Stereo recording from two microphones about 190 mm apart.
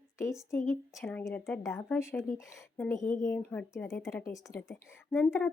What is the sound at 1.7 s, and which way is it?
Speech, 15° left (ahead or behind).